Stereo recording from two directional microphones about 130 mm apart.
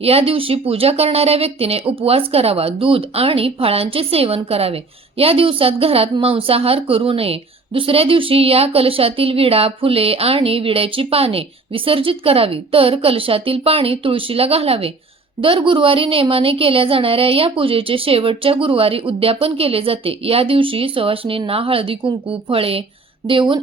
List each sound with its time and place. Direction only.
0.0 s speech: 50° right (ahead or behind)